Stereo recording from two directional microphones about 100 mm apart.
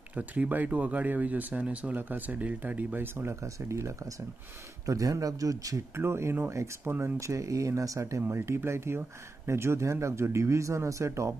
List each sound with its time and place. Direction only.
0.1 s speech: 15° right (ahead or behind)